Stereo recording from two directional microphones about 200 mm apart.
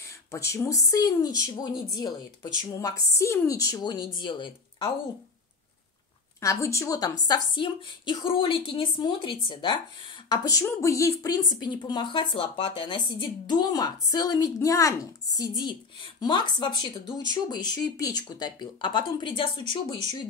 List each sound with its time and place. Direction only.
0.3 s speech: 15° left (ahead or behind)
6.4 s speech: 15° left (ahead or behind)